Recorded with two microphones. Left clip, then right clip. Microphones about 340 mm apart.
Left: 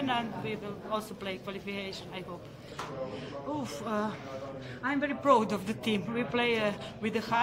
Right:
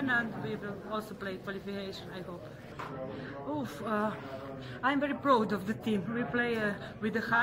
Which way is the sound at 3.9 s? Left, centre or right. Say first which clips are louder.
Right 2 dB; centre.